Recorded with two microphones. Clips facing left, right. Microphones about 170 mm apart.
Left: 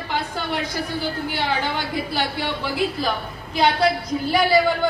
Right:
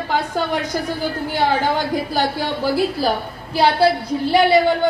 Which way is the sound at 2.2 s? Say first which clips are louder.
Right 4 dB; 40° right (ahead or behind).